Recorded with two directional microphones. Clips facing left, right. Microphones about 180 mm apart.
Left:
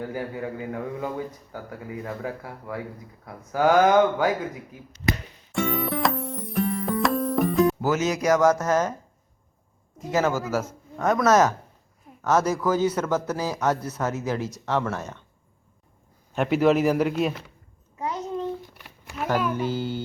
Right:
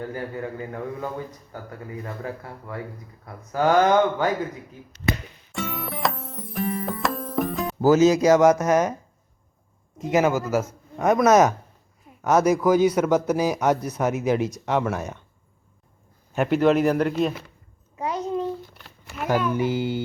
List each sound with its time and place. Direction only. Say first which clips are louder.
0.1 s a man's voice: even; 10° left (ahead or behind)
5.5 s music: left 5 dB; centre (ahead or behind)
7.8 s a man's voice: right 8 dB; 30° right (ahead or behind); by 9.0 s 15° right (ahead or behind)
10.0 s a man's voice: right 3 dB; 15° right (ahead or behind)
16.3 s speech: right 1 dB; centre (ahead or behind)
17.9 s babbling: right 3 dB; 20° right (ahead or behind)
18.8 s a sound: even; centre (ahead or behind)
19.5 s a man's voice: right 3 dB; 15° right (ahead or behind)